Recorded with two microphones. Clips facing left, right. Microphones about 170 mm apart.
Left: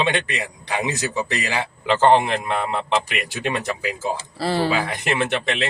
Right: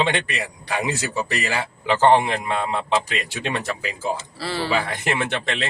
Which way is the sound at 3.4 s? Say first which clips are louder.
Left 3 dB; 10° left (ahead or behind).